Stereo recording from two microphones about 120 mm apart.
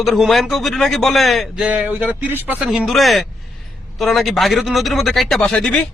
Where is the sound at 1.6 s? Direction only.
10° right (ahead or behind).